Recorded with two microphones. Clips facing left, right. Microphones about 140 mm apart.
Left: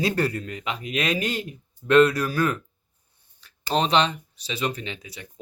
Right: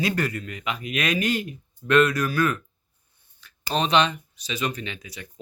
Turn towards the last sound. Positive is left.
turn(degrees=25)  # may be behind; listen again after turning